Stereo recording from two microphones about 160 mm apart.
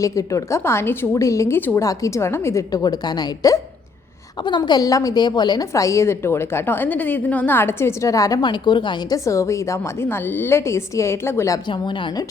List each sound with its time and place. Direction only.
0.0 s a woman's voice: 20° left (ahead or behind)
11.7 s a woman's voice: 30° left (ahead or behind)